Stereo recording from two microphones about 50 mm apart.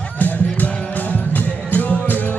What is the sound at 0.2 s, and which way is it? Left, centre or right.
Music, left.